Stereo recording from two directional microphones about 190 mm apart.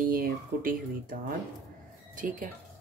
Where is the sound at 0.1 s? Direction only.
50° right (ahead or behind).